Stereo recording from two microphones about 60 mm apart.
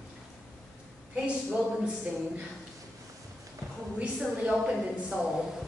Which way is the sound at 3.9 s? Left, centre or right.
Centre.